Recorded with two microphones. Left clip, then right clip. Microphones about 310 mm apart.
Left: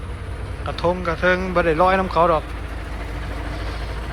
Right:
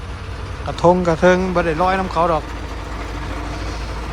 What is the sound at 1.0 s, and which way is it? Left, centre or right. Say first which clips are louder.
Speech: right 5 dB; centre.